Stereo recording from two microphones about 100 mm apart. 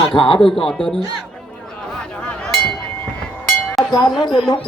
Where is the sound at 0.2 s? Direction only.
60° left (ahead or behind).